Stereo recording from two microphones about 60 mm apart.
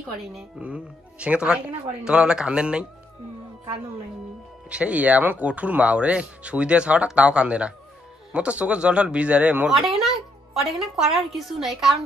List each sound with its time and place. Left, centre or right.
0.6 s speech: right
4.6 s speech: right
9.8 s a woman's voice: centre